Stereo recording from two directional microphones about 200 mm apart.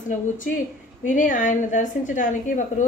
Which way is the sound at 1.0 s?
40° left (ahead or behind).